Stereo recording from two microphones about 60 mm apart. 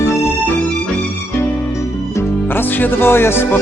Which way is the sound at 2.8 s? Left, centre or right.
Left.